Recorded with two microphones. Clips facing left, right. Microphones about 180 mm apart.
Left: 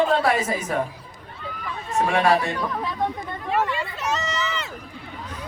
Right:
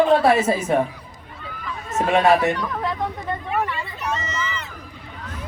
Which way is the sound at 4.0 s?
85° left.